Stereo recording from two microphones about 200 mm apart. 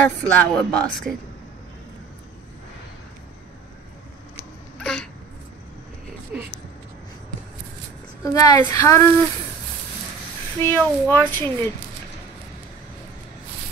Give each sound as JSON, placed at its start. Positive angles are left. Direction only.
{"t": 0.2, "sound": "speech", "side_deg": 5}
{"t": 4.7, "sound": "a sound", "side_deg": 5}
{"t": 6.3, "sound": "speech", "side_deg": -5}
{"t": 8.2, "sound": "a woman's voice", "side_deg": 15}
{"t": 10.6, "sound": "a woman's voice", "side_deg": 10}